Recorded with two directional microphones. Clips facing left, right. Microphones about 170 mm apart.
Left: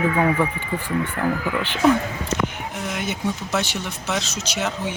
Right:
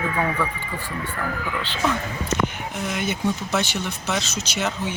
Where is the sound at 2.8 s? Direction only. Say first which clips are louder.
Right 1 dB; centre (ahead or behind).